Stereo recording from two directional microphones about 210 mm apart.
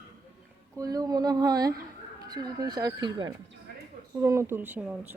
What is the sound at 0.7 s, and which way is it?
Speech, 15° right (ahead or behind).